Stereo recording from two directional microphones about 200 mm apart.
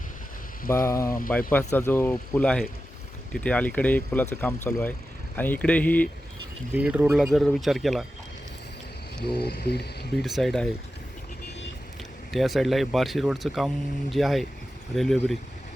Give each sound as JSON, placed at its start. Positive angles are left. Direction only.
{"t": 0.7, "sound": "speech", "side_deg": 15}
{"t": 6.7, "sound": "speech", "side_deg": -5}
{"t": 9.4, "sound": "speech", "side_deg": 50}
{"t": 10.2, "sound": "speech", "side_deg": 0}
{"t": 12.3, "sound": "speech", "side_deg": 0}